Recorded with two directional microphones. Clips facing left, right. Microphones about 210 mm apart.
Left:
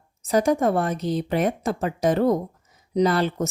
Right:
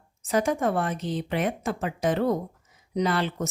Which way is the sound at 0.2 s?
40° left (ahead or behind).